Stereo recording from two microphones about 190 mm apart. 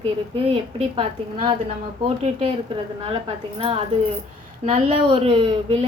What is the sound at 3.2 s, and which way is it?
A woman's voice, 25° right (ahead or behind).